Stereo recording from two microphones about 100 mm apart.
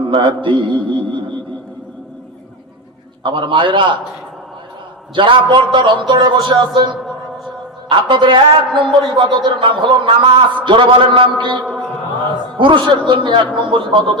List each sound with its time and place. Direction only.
0.0 s a man's voice: 60° right (ahead or behind)
3.2 s a man's voice: 55° right (ahead or behind)
5.1 s a man's voice: 55° right (ahead or behind)
7.0 s a sound: centre (ahead or behind)
7.9 s a man's voice: 55° right (ahead or behind)
12.5 s a man's voice: 55° right (ahead or behind)